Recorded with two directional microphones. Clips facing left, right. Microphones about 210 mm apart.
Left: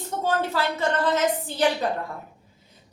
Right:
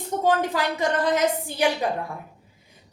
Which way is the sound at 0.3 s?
15° right (ahead or behind).